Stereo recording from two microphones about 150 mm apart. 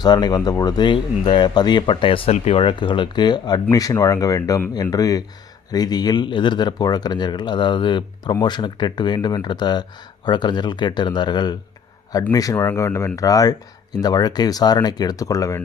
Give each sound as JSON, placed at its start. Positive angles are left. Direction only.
{"t": 0.0, "sound": "speech", "side_deg": 25}